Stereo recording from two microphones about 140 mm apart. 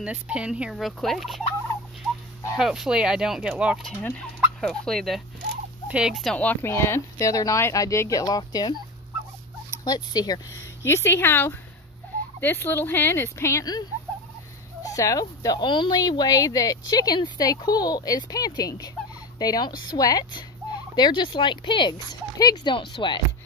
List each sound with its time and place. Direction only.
0.0 s fowl: 10° right (ahead or behind)
2.5 s fowl: 5° right (ahead or behind)
3.8 s speech: 5° left (ahead or behind)
4.6 s fowl: 5° left (ahead or behind)
5.9 s speech: 5° right (ahead or behind); by 8.7 s 30° left (ahead or behind)
9.8 s speech: 30° left (ahead or behind)